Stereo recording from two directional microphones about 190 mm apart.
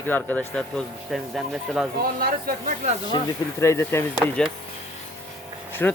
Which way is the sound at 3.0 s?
20° left (ahead or behind).